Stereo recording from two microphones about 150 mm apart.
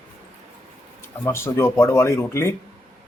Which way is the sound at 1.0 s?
15° left (ahead or behind).